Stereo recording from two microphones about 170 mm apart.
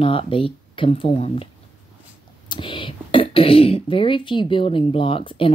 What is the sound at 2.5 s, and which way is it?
Speech, 30° left (ahead or behind).